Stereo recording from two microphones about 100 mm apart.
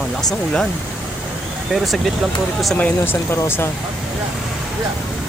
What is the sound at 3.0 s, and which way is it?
Speech, 25° left (ahead or behind).